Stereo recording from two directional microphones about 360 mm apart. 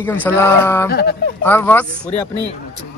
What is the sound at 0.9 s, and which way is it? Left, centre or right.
Speech, left.